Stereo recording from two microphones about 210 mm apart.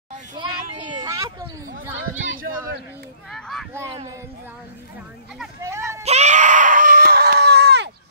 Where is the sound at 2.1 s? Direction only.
70° right (ahead or behind).